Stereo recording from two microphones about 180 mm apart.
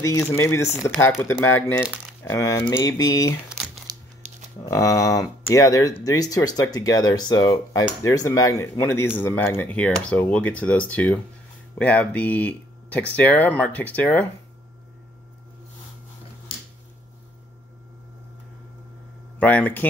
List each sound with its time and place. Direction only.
0.2 s speech: 10° left (ahead or behind)
3.9 s crumpling: 20° right (ahead or behind)
4.6 s speech: 15° left (ahead or behind)
19.3 s speech: 10° left (ahead or behind)